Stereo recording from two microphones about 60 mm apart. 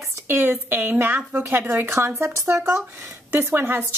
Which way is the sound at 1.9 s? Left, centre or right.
Right.